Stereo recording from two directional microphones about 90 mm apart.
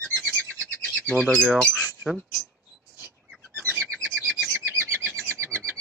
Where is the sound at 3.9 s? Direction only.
10° left (ahead or behind).